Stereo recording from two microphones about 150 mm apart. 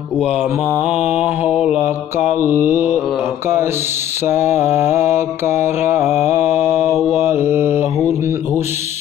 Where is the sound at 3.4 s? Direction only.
15° right (ahead or behind).